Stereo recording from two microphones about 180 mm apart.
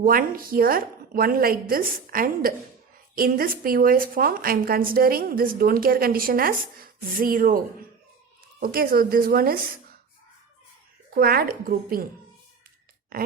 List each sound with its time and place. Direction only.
0.0 s a woman's voice: 50° right (ahead or behind)
8.6 s a woman's voice: 55° right (ahead or behind)
11.1 s a woman's voice: 55° right (ahead or behind)